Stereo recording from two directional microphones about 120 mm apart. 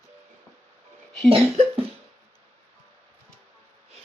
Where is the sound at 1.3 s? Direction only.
55° right (ahead or behind).